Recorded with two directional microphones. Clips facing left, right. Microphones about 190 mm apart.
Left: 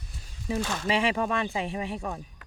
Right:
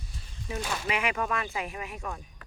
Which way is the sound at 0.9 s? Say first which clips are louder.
Left 4 dB; 30° left (ahead or behind).